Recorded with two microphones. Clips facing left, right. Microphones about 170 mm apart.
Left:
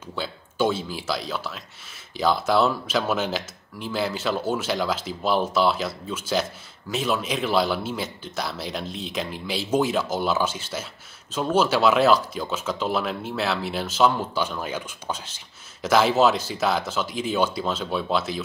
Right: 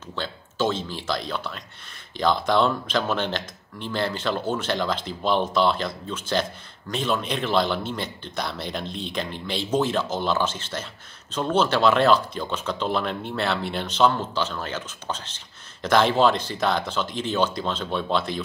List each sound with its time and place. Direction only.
0.1 s speech: 10° left (ahead or behind)